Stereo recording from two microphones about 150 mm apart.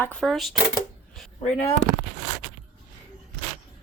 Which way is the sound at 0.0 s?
5° left (ahead or behind).